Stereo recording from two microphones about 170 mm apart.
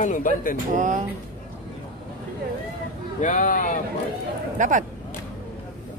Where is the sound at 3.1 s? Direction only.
45° left (ahead or behind).